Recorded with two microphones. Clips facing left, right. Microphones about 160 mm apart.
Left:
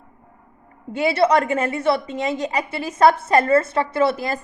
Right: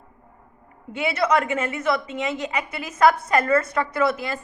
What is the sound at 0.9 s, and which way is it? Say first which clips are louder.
A woman's voice: left 4 dB; 35° left (ahead or behind).